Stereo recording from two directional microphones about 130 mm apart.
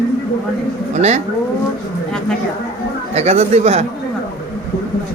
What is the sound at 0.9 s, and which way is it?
Speech, 60° right (ahead or behind).